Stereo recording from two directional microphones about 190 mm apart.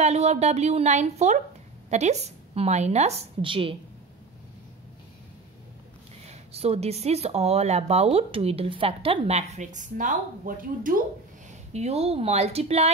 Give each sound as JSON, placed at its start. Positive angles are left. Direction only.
{"t": 0.0, "sound": "speech", "side_deg": -35}
{"t": 6.2, "sound": "speech", "side_deg": -30}
{"t": 11.7, "sound": "speech", "side_deg": -35}